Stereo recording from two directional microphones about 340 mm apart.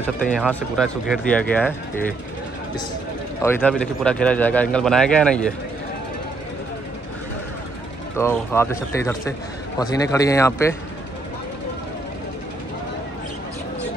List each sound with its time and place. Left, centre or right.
0.0 s speech: centre
3.4 s speech: centre
8.2 s speech: centre